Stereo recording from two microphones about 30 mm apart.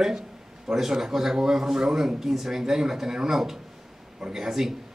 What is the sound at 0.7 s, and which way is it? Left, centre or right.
Speech, centre.